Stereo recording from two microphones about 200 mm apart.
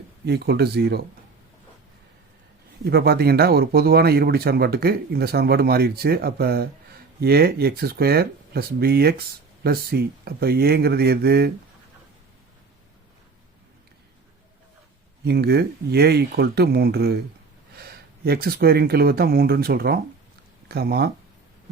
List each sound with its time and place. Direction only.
0.3 s speech: 55° right (ahead or behind)
2.8 s speech: 50° right (ahead or behind)
15.2 s speech: 55° right (ahead or behind)